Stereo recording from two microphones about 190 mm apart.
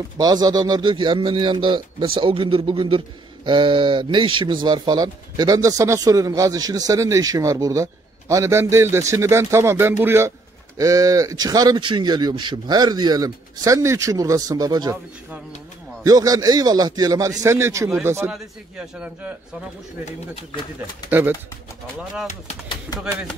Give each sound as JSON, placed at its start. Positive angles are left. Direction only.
{"t": 0.2, "sound": "a man's voice", "side_deg": -20}
{"t": 16.0, "sound": "a man's voice", "side_deg": -20}
{"t": 21.1, "sound": "speech", "side_deg": -10}